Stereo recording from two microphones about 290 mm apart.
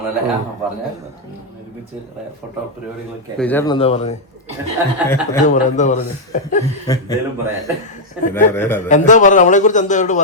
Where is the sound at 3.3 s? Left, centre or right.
Centre.